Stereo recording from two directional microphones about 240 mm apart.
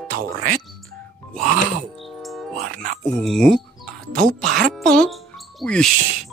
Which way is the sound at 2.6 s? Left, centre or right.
Right.